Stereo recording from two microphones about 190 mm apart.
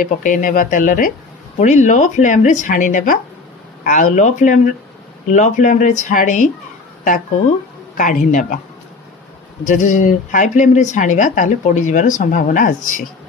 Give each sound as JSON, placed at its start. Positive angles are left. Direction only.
{"t": 0.0, "sound": "speech", "side_deg": 45}
{"t": 8.0, "sound": "speech", "side_deg": 45}
{"t": 9.7, "sound": "speech", "side_deg": 40}